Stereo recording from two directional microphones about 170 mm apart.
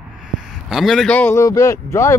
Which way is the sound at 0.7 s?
Centre (ahead or behind).